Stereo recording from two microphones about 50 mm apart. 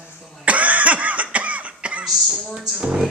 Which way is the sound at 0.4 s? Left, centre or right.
Right.